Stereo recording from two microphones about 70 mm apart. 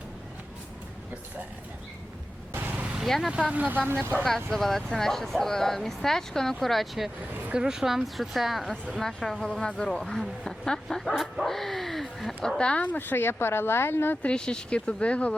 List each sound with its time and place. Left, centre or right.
2.5 s vehicle: right
2.8 s vehicle: centre
3.1 s speech: centre
3.5 s speech: right
4.2 s speech: centre
12.5 s speech: centre; by 14.2 s left
14.2 s speech: centre